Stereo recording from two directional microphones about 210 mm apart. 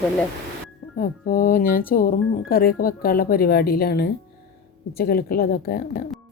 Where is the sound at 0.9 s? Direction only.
40° left (ahead or behind).